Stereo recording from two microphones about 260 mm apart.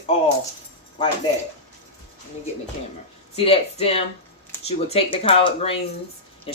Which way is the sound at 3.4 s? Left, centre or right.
Left.